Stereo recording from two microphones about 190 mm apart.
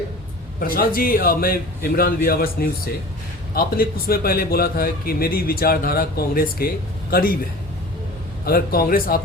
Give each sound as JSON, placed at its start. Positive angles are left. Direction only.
{"t": 0.6, "sound": "a man's voice", "side_deg": 50}
{"t": 8.4, "sound": "a man's voice", "side_deg": 50}